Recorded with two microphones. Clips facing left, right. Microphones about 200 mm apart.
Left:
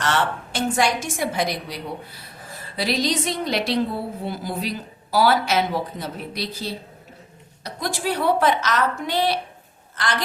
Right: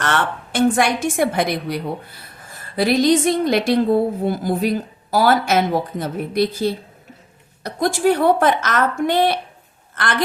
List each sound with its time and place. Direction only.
0.0 s a woman's voice: 55° right (ahead or behind)